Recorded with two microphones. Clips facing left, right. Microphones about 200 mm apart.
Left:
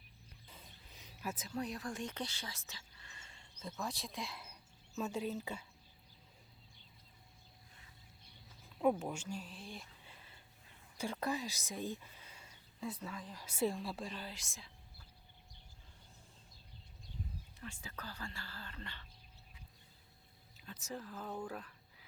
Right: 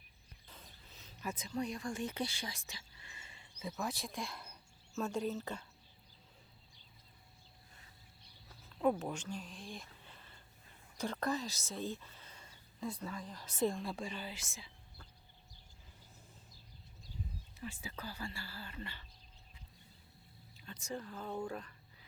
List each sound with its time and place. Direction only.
0.4 s a sound: 10° left (ahead or behind)
4.9 s speech: 5° left (ahead or behind)
8.8 s speech: 5° left (ahead or behind)
17.6 s speech: 10° right (ahead or behind)
20.6 s speech: 5° left (ahead or behind)